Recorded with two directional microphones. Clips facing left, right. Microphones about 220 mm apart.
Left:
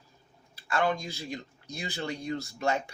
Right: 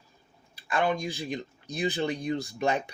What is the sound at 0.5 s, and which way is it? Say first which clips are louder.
Speech: right 1 dB; 15° right (ahead or behind).